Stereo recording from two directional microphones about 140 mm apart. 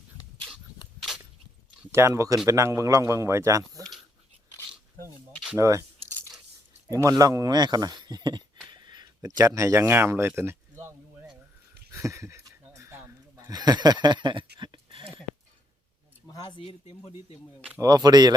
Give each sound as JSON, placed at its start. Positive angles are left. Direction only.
{"t": 1.0, "sound": "a sound", "side_deg": -5}
{"t": 1.9, "sound": "speech", "side_deg": -20}
{"t": 5.5, "sound": "speech", "side_deg": -20}
{"t": 6.9, "sound": "speech", "side_deg": -25}
{"t": 8.7, "sound": "a sound", "side_deg": -30}
{"t": 13.5, "sound": "speech", "side_deg": -30}
{"t": 16.3, "sound": "speech", "side_deg": 25}
{"t": 16.6, "sound": "speech", "side_deg": 40}
{"t": 17.7, "sound": "speech", "side_deg": -25}